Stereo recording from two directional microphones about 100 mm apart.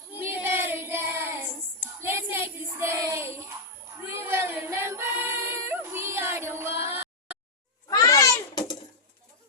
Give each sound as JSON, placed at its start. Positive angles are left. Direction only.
{"t": 0.2, "sound": "child singing", "side_deg": -25}
{"t": 4.0, "sound": "choir", "side_deg": -25}
{"t": 7.9, "sound": "a sound", "side_deg": 40}